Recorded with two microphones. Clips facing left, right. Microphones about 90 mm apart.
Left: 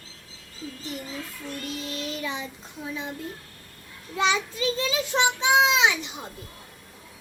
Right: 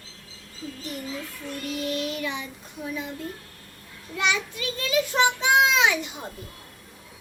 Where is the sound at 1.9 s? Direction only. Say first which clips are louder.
Right 3 dB; 30° left (ahead or behind).